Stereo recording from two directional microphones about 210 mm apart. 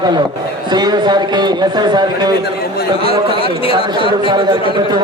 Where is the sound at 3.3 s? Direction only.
25° left (ahead or behind).